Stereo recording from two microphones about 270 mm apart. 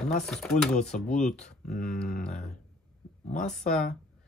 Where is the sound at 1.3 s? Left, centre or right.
Left.